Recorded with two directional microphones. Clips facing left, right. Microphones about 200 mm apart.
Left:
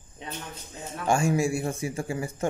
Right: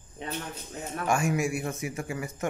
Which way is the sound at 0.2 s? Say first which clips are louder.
Right 3 dB; 55° right (ahead or behind).